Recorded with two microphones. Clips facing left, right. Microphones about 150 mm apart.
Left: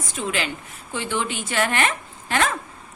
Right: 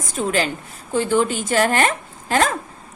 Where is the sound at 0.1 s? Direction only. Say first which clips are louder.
Right 6 dB; 40° right (ahead or behind).